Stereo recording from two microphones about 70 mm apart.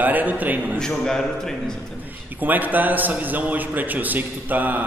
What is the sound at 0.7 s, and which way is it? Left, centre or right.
Speech, centre.